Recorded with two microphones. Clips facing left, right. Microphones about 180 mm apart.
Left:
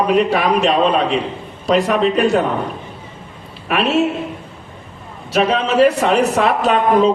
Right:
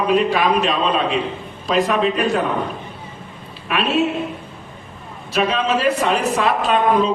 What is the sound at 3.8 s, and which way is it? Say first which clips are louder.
Speech: left 3 dB; 75° left (ahead or behind).